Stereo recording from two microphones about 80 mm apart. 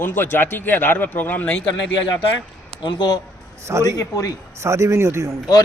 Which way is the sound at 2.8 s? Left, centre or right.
Left.